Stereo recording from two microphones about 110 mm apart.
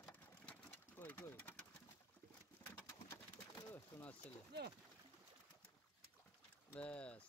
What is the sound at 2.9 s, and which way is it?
Pigeon, 30° left (ahead or behind).